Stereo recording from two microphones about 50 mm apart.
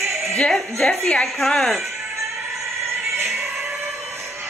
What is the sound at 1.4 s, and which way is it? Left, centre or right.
Speech, centre.